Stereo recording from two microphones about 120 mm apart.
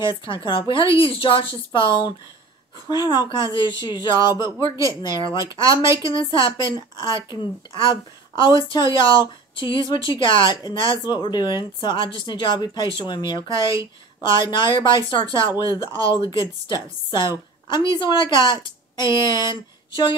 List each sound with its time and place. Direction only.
0.0 s speech: 45° left (ahead or behind)
4.6 s speech: 25° right (ahead or behind)
5.0 s speech: 40° left (ahead or behind)
5.4 s speech: 30° right (ahead or behind)
6.0 s a woman's voice: 45° left (ahead or behind)